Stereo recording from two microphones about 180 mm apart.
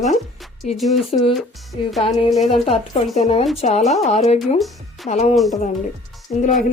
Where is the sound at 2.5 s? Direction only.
35° left (ahead or behind).